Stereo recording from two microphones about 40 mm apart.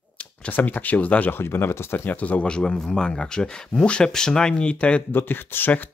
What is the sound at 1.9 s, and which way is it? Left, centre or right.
Speech, left.